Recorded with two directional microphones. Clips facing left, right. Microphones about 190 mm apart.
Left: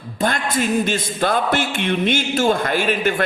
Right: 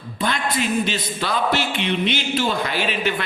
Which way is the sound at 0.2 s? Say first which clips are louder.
Left 3 dB; 45° left (ahead or behind).